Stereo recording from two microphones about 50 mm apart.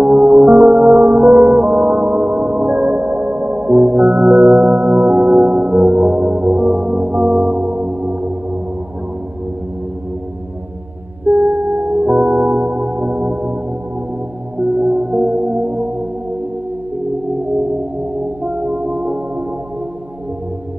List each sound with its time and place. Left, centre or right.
0.0 s music: right
11.2 s music: right
14.6 s music: right
18.4 s music: right